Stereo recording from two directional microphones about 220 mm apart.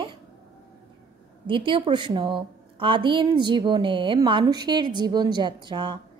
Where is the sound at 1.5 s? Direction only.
20° right (ahead or behind).